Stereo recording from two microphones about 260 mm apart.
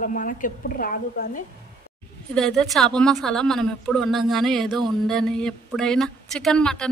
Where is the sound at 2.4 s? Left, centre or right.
Centre.